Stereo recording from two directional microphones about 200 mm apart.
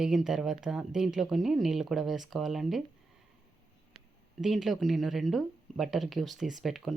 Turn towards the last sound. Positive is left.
turn(degrees=0)  # may be behind; listen again after turning